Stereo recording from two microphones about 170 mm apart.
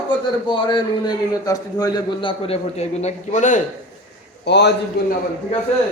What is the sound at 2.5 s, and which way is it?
A man's voice, 40° left (ahead or behind).